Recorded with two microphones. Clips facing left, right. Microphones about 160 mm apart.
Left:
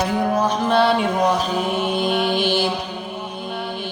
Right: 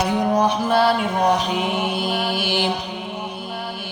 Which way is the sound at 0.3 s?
15° right (ahead or behind).